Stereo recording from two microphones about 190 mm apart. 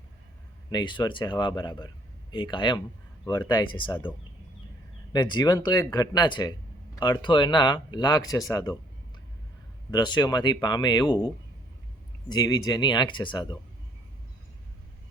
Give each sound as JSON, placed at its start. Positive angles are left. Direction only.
{"t": 0.7, "sound": "speech", "side_deg": 25}
{"t": 5.1, "sound": "speech", "side_deg": 20}
{"t": 9.9, "sound": "speech", "side_deg": 20}
{"t": 12.3, "sound": "speech", "side_deg": 20}